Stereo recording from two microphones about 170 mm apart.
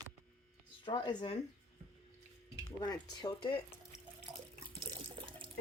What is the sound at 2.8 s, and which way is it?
Speech, 25° left (ahead or behind).